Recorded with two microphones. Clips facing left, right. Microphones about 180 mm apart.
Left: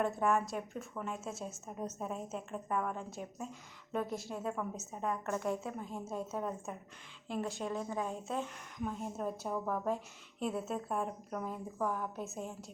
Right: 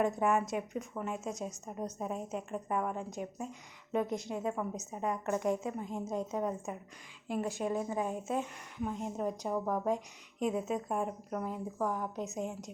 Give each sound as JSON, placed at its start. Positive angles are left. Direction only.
{"t": 0.0, "sound": "a woman's voice", "side_deg": -15}